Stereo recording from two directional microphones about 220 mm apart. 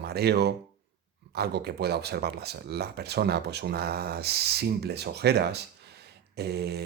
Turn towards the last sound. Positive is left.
turn(degrees=-50)  # may be behind; listen again after turning